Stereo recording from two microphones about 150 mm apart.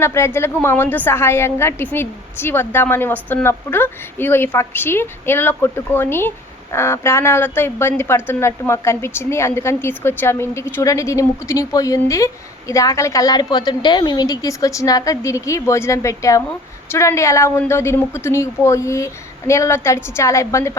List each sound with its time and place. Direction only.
0.0 s a woman's voice: 15° left (ahead or behind)